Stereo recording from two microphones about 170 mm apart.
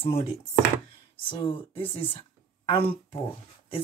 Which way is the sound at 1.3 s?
30° left (ahead or behind).